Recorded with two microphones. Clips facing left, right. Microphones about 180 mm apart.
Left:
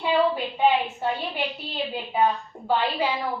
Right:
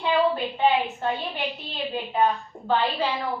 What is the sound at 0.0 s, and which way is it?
A woman's voice, 10° left (ahead or behind).